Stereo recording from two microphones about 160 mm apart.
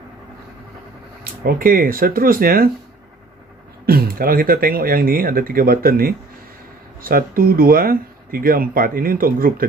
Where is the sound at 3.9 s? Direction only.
70° right (ahead or behind).